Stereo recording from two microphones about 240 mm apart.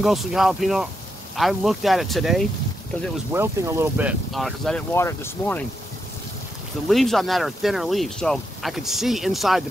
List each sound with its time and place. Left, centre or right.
0.0 s speech: centre
3.3 s speech: centre
6.9 s speech: centre